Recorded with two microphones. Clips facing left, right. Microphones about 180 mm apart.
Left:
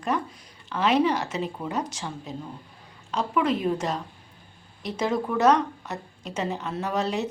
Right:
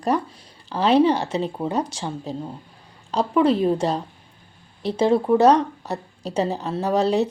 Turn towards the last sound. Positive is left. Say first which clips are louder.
# right 7 dB
turn(degrees=-35)  # may be behind; listen again after turning